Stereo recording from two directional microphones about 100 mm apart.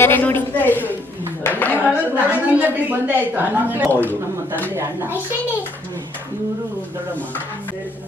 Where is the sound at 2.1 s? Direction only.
20° right (ahead or behind).